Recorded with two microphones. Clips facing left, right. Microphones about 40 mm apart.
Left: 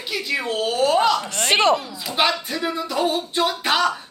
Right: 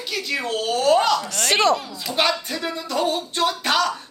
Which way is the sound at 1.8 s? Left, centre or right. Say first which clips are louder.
Left 1 dB; centre.